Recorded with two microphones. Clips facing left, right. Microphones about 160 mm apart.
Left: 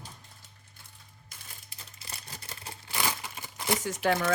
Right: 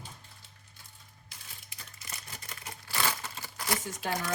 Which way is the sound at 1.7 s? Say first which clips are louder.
Even; 30° left (ahead or behind).